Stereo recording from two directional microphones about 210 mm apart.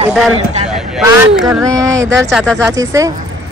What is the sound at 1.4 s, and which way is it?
Speech, 15° right (ahead or behind).